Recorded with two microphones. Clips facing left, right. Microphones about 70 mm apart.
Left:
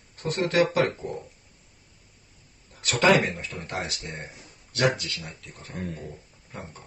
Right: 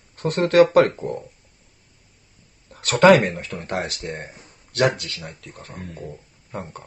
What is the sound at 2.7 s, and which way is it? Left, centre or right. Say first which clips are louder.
Speech: right 7 dB; right.